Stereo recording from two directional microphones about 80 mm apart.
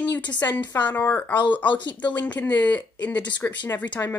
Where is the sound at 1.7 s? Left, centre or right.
Left.